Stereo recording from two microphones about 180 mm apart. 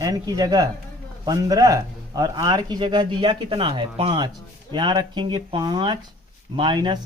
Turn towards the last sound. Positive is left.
turn(degrees=-25)  # may be behind; listen again after turning